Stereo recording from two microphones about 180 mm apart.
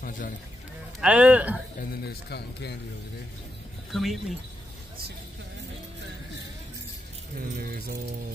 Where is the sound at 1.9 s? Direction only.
60° left (ahead or behind).